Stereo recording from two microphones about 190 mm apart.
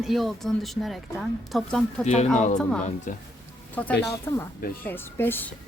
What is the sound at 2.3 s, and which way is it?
Speech, 40° left (ahead or behind).